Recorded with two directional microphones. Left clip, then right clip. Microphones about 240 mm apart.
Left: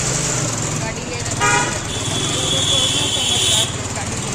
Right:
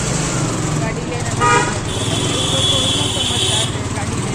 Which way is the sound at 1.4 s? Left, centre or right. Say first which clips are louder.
Right 3 dB; left.